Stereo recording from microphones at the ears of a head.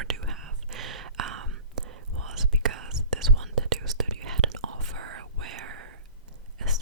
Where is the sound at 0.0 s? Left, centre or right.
Right.